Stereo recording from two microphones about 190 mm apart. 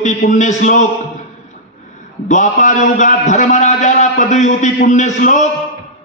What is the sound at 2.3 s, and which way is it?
A man's voice, 40° left (ahead or behind).